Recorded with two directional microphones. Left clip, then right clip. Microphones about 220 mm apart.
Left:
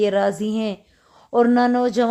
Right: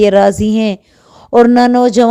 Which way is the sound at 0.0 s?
35° right (ahead or behind).